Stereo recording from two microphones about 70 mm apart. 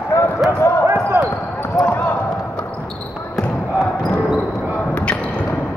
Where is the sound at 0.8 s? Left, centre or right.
Right.